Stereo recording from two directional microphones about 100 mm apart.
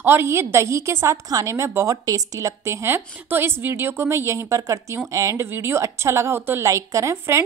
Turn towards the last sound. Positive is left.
turn(degrees=-30)  # may be behind; listen again after turning